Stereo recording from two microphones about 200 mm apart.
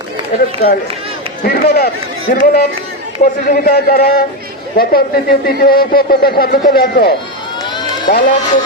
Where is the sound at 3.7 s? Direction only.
45° left (ahead or behind).